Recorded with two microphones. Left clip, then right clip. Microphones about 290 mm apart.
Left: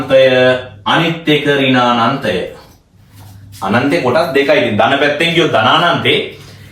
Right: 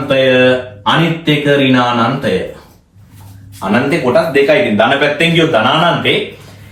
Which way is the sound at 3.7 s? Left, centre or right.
Centre.